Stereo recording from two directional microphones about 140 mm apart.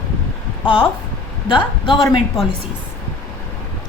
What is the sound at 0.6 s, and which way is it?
A woman's voice, 35° left (ahead or behind).